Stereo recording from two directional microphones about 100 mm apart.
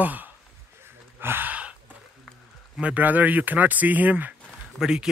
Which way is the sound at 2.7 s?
15° right (ahead or behind).